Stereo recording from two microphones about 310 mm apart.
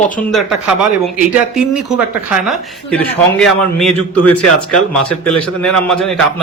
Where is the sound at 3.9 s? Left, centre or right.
Left.